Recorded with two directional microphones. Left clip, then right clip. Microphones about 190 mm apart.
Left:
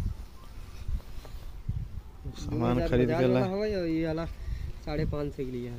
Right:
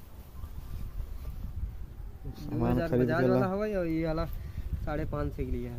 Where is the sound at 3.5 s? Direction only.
30° right (ahead or behind); by 5.7 s 10° right (ahead or behind).